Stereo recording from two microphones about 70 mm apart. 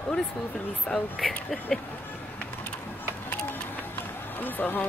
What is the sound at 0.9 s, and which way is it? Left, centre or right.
Speech, centre.